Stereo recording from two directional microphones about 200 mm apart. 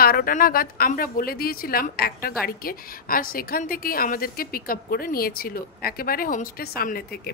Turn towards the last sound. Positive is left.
turn(degrees=50)  # may be behind; listen again after turning